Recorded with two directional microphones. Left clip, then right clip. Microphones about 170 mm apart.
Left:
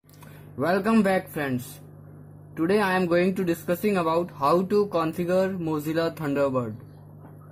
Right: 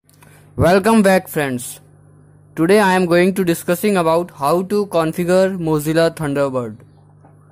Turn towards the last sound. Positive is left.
turn(degrees=-30)  # may be behind; listen again after turning